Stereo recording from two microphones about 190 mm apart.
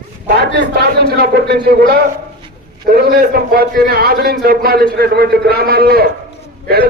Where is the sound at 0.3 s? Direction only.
55° right (ahead or behind).